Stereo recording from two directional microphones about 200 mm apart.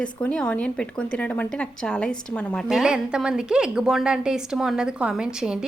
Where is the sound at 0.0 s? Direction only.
5° left (ahead or behind).